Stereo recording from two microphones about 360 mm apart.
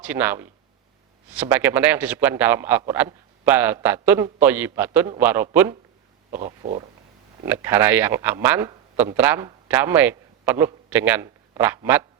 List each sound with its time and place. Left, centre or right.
0.0 s a man's voice: centre
6.4 s speech: centre
7.4 s speech: centre